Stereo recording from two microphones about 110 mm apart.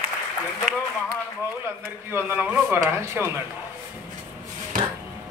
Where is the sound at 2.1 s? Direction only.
20° right (ahead or behind).